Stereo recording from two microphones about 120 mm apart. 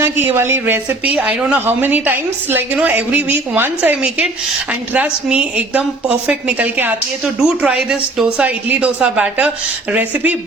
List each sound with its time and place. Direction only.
0.0 s speech: 20° right (ahead or behind)